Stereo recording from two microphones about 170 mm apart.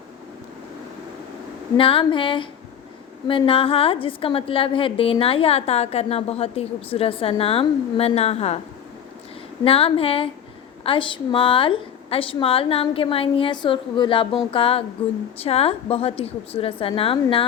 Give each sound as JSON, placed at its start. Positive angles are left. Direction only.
{"t": 1.7, "sound": "a woman's voice", "side_deg": 30}
{"t": 9.6, "sound": "a woman's voice", "side_deg": 35}